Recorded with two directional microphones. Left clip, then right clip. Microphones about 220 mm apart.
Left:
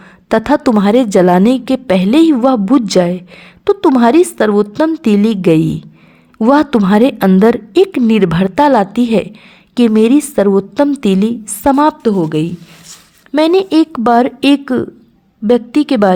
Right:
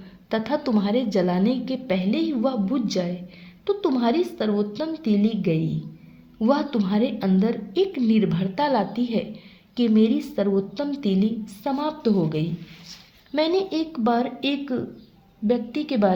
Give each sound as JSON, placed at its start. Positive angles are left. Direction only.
{"t": 0.3, "sound": "a woman's voice", "side_deg": 40}